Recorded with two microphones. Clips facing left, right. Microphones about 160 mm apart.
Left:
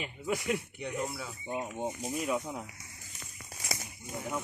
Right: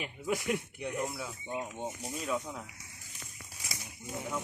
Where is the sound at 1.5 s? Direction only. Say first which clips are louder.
Left 3 dB; 15° left (ahead or behind).